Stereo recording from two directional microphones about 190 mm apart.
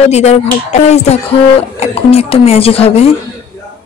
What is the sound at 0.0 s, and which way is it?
Speech, 35° left (ahead or behind).